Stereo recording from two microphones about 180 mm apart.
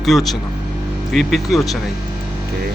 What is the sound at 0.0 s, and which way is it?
Speech, centre (ahead or behind).